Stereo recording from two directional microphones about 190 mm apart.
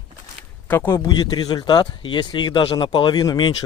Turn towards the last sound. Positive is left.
turn(degrees=20)  # may be behind; listen again after turning